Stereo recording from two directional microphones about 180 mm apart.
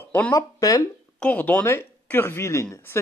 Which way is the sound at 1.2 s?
10° left (ahead or behind).